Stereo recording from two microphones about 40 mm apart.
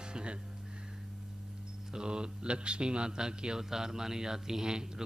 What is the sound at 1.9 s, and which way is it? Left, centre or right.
Speech, right.